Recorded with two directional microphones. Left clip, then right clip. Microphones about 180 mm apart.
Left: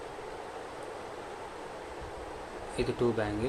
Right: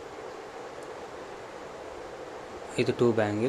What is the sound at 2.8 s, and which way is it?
Speech, 30° right (ahead or behind).